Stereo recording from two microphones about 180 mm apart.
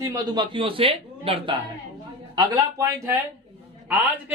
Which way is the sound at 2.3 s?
20° right (ahead or behind).